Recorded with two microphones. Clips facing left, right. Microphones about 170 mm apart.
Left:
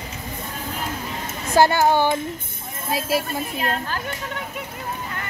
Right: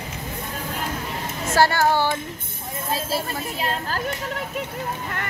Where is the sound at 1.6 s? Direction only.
20° left (ahead or behind).